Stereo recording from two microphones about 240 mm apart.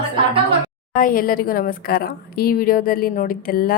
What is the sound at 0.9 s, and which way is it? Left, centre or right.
A woman's voice, left.